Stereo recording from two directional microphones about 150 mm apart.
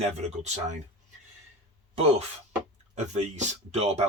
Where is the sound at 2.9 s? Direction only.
50° right (ahead or behind).